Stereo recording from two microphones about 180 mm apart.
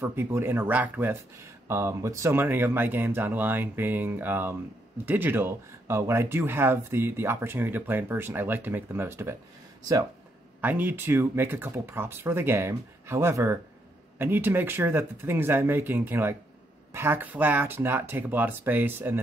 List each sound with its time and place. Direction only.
0.0 s speech: 15° right (ahead or behind)
10.6 s speech: 10° right (ahead or behind)